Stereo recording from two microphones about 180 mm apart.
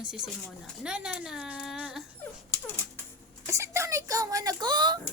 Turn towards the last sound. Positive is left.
turn(degrees=-25)  # may be behind; listen again after turning